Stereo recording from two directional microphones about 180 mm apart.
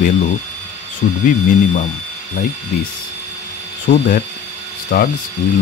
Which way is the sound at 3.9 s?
45° left (ahead or behind).